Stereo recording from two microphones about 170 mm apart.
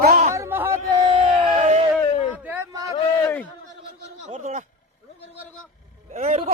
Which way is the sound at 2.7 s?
20° right (ahead or behind).